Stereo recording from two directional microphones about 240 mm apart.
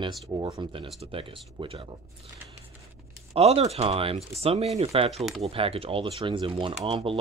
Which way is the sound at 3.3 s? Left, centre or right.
Right.